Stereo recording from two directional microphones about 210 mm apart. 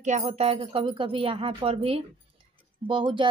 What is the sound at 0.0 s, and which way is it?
Speech, 30° right (ahead or behind).